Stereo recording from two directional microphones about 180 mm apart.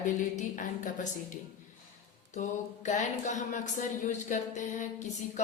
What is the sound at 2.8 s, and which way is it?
Speech, 40° left (ahead or behind).